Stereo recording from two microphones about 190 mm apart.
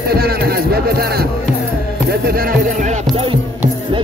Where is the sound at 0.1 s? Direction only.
55° right (ahead or behind).